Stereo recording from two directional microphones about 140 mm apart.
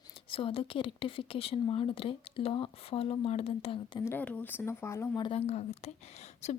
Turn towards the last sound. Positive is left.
turn(degrees=50)  # may be behind; listen again after turning